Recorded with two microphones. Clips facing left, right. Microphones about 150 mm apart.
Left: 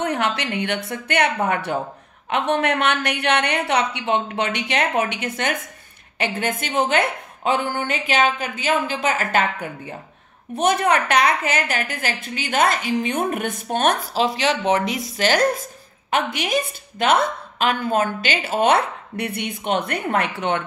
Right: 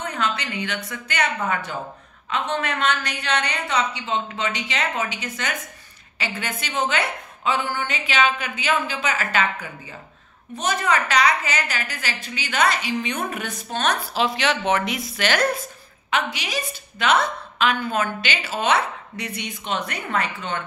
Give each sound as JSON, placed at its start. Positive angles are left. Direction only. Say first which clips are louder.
{"t": 0.0, "sound": "a sound", "louder": "left 4 dB", "side_deg": 70}
{"t": 0.4, "sound": "a woman's voice", "louder": "left 5 dB", "side_deg": 65}
{"t": 14.1, "sound": "speech", "louder": "left 2 dB", "side_deg": 35}
{"t": 16.1, "sound": "a woman's voice", "louder": "left 4 dB", "side_deg": 50}